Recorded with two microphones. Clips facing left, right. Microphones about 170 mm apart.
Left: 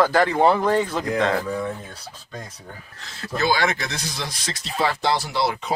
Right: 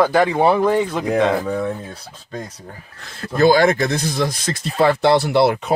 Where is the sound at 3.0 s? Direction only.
50° right (ahead or behind).